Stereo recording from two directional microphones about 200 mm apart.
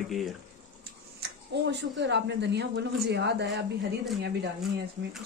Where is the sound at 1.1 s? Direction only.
60° right (ahead or behind).